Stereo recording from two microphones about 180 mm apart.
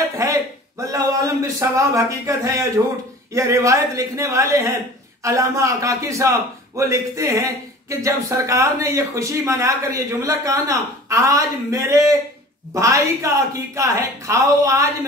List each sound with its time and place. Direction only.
0.2 s a man's voice: 20° right (ahead or behind)